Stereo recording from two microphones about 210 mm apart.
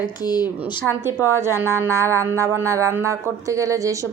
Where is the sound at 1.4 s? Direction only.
10° right (ahead or behind).